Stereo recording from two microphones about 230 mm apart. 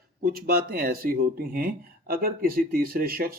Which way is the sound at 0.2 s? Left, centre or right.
Right.